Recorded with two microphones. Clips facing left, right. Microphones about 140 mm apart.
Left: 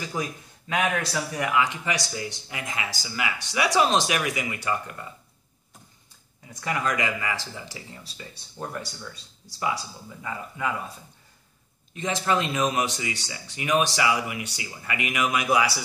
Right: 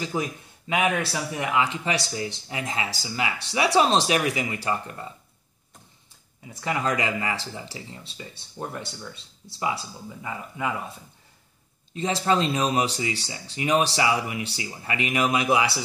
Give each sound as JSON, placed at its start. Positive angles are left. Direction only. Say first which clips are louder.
{"t": 0.1, "sound": "speech", "louder": "right 2 dB", "side_deg": -20}
{"t": 0.7, "sound": "speech", "louder": "right 2 dB", "side_deg": -5}
{"t": 1.3, "sound": "speech", "louder": "even", "side_deg": -25}
{"t": 6.5, "sound": "speech", "louder": "right 1 dB", "side_deg": -25}
{"t": 8.2, "sound": "speech", "louder": "right 1 dB", "side_deg": -15}
{"t": 11.9, "sound": "speech", "louder": "right 2 dB", "side_deg": -30}